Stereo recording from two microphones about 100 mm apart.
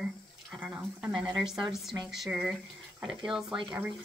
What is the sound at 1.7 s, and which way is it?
A woman's voice, 5° right (ahead or behind).